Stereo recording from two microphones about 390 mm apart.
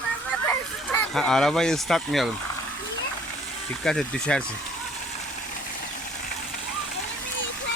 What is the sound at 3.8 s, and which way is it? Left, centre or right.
Speech, centre.